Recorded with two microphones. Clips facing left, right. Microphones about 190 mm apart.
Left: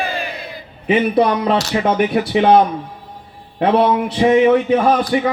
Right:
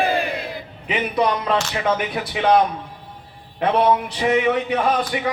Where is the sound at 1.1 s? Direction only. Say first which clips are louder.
Left 5 dB; 35° left (ahead or behind).